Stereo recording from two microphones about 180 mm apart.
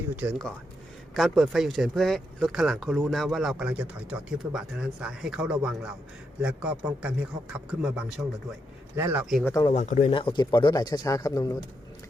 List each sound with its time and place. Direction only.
0.2 s a man's voice: 5° right (ahead or behind)
9.4 s speech: 20° left (ahead or behind)
9.7 s speech: 40° left (ahead or behind)
10.2 s speech: 25° left (ahead or behind)